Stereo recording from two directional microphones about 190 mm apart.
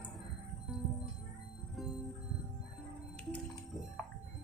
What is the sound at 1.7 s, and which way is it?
Music, centre (ahead or behind).